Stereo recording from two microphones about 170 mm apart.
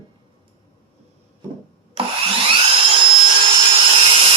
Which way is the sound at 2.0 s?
35° right (ahead or behind).